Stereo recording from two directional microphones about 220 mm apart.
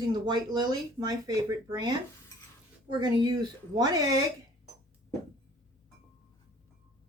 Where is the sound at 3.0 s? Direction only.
20° right (ahead or behind).